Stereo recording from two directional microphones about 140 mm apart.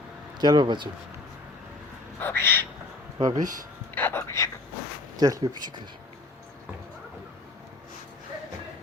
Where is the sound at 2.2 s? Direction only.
15° left (ahead or behind).